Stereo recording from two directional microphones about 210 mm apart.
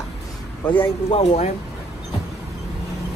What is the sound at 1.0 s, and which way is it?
Speech, 30° left (ahead or behind).